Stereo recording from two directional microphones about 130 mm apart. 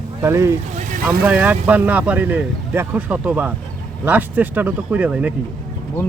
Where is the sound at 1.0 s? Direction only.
10° right (ahead or behind).